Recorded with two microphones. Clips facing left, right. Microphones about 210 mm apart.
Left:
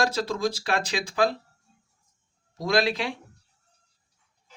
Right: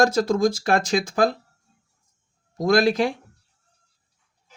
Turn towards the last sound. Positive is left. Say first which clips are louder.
# right 6 dB
turn(degrees=-45)  # may be behind; listen again after turning